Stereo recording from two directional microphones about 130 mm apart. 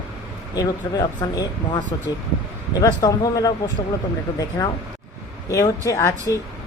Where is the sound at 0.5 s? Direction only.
30° left (ahead or behind).